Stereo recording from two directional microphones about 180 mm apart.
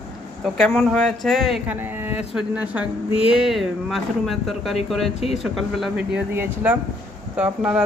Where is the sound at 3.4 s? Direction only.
Centre (ahead or behind).